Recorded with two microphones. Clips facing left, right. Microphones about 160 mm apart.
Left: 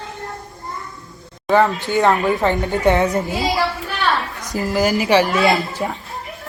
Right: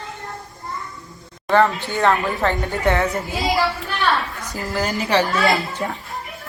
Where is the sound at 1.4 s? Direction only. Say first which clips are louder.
Left 1 dB; 10° left (ahead or behind).